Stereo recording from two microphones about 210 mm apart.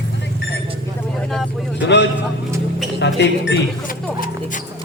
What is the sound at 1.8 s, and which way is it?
Speech, 55° left (ahead or behind).